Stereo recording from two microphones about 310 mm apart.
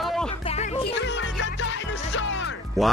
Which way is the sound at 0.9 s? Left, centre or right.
Left.